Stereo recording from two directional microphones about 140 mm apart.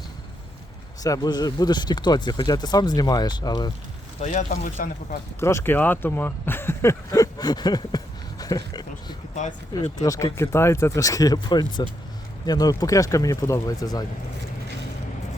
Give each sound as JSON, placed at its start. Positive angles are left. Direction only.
{"t": 1.0, "sound": "speech", "side_deg": 25}
{"t": 4.2, "sound": "speech", "side_deg": 60}
{"t": 5.4, "sound": "speech", "side_deg": 20}
{"t": 9.3, "sound": "speech", "side_deg": 60}
{"t": 10.0, "sound": "speech", "side_deg": 25}